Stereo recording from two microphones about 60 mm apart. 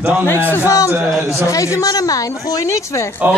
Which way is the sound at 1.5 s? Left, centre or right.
Left.